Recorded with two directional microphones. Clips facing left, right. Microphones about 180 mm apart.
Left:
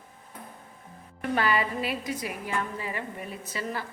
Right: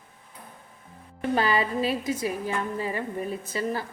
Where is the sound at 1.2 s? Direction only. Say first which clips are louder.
Right 2 dB; 30° right (ahead or behind).